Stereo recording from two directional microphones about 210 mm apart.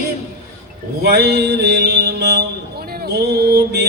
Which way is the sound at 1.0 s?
50° right (ahead or behind).